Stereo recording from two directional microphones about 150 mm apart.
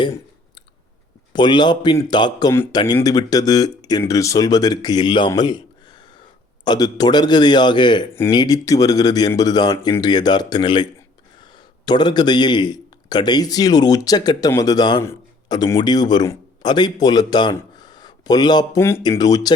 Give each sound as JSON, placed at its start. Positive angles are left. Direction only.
{"t": 1.3, "sound": "speech", "side_deg": 30}
{"t": 5.3, "sound": "a sound", "side_deg": 30}
{"t": 6.7, "sound": "a man's voice", "side_deg": 25}
{"t": 18.8, "sound": "speech", "side_deg": 15}